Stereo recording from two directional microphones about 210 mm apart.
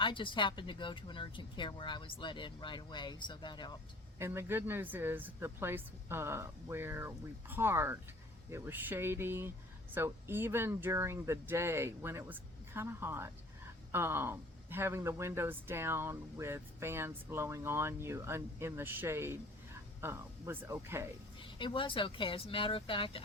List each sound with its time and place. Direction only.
0.0 s speech: 25° left (ahead or behind)
4.2 s speech: 10° right (ahead or behind)
21.3 s speech: 25° left (ahead or behind)